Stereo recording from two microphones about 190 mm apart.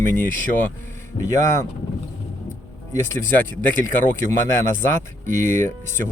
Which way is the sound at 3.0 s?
10° left (ahead or behind).